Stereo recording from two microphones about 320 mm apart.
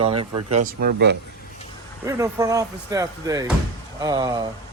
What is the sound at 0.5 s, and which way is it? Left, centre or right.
Speech, right.